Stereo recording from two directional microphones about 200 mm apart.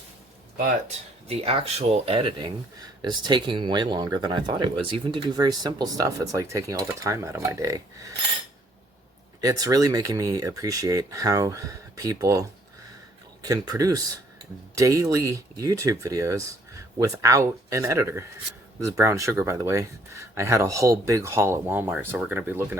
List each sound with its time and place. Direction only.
0.9 s speech: 30° right (ahead or behind)
9.4 s speech: 15° right (ahead or behind)